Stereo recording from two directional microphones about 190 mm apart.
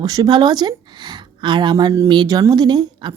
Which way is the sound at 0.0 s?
20° right (ahead or behind).